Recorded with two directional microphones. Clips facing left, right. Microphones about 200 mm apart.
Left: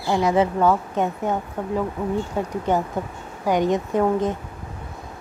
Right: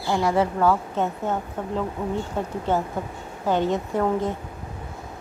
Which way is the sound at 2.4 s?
10° left (ahead or behind).